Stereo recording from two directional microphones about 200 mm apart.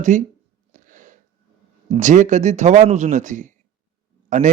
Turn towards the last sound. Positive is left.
turn(degrees=-40)  # may be behind; listen again after turning